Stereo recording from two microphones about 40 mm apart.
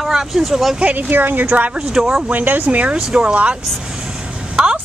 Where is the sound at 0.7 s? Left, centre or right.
Right.